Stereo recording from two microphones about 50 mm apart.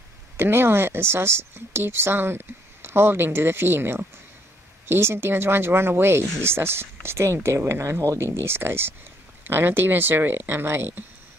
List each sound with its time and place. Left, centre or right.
0.4 s a woman's voice: right
8.5 s a woman's voice: right